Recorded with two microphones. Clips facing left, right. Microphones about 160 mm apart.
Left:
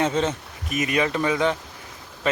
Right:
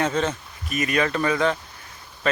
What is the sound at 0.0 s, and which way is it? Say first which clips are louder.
Speech: left 1 dB; 20° left (ahead or behind).